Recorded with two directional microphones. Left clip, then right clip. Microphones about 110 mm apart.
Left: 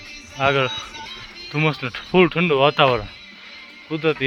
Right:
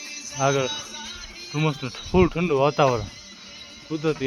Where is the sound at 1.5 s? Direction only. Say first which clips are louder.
Left 5 dB; 5° left (ahead or behind).